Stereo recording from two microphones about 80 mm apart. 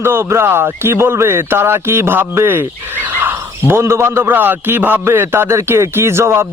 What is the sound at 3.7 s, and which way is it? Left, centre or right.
A man's voice, right.